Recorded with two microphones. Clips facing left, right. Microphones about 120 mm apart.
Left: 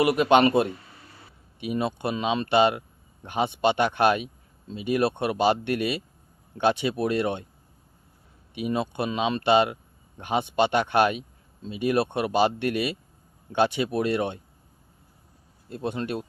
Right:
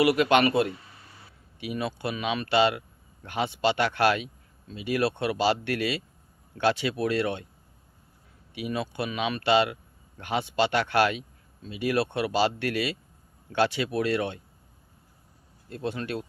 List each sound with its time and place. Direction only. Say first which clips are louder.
0.0 s speech: left 2 dB; 25° left (ahead or behind)
8.5 s speech: left 3 dB; 25° left (ahead or behind)
15.7 s speech: left 2 dB; 20° left (ahead or behind)